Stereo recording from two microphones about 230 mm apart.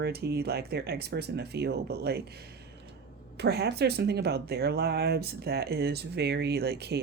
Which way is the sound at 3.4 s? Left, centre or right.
Right.